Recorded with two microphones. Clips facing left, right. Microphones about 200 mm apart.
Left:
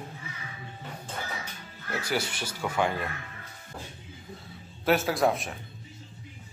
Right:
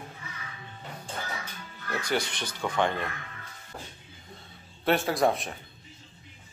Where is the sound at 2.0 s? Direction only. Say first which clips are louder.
Right 1 dB; 5° left (ahead or behind).